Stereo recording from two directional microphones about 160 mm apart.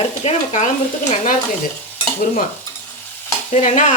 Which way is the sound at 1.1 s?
55° left (ahead or behind).